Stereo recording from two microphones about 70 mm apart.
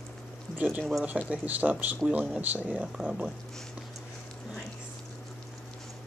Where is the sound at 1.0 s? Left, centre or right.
Right.